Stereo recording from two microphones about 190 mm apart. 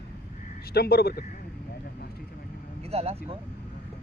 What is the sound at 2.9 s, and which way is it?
Speech, 30° right (ahead or behind).